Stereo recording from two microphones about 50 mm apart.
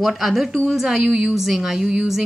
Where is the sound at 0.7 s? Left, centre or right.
Centre.